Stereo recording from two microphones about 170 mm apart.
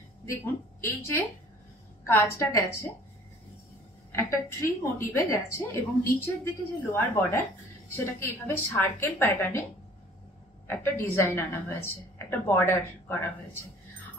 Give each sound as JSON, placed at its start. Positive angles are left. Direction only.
{"t": 0.2, "sound": "a woman's voice", "side_deg": 15}
{"t": 4.1, "sound": "a woman's voice", "side_deg": 15}
{"t": 10.7, "sound": "a woman's voice", "side_deg": 15}